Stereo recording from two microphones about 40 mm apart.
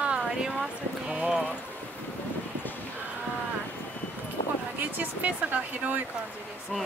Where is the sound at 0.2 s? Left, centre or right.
Centre.